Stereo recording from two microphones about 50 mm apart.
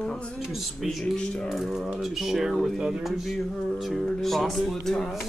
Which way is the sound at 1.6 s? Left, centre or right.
Centre.